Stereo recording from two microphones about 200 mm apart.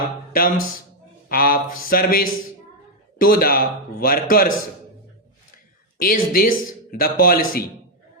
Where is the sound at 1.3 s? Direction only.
45° left (ahead or behind).